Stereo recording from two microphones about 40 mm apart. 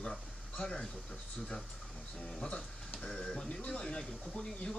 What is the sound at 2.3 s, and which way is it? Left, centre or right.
Speech, left.